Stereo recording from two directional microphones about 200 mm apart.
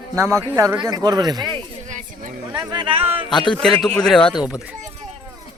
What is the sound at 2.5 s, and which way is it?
Speech, 20° right (ahead or behind).